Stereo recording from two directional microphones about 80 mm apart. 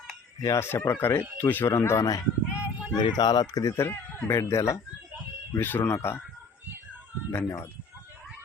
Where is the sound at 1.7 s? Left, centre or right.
Left.